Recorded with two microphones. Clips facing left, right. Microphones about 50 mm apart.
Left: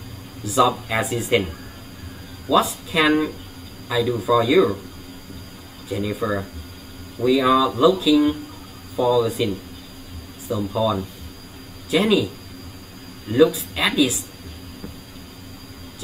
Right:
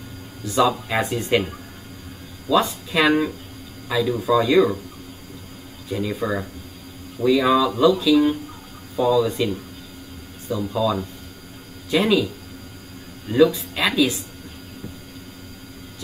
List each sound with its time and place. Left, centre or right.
0.5 s speech: centre
2.5 s speech: centre
5.9 s speech: centre
10.7 s speech: centre
13.3 s speech: centre